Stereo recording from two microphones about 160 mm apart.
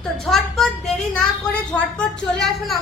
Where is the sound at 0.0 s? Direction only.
Centre (ahead or behind).